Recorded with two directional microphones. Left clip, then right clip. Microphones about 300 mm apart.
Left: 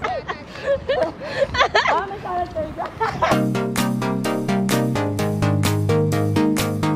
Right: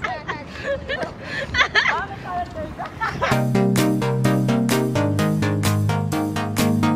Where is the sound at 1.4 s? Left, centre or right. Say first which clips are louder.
Left 1 dB; centre.